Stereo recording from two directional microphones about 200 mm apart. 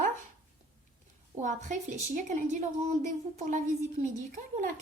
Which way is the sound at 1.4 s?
40° right (ahead or behind).